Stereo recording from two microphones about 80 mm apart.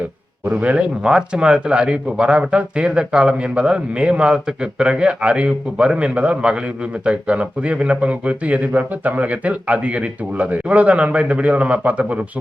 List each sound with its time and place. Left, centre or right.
0.4 s speech: centre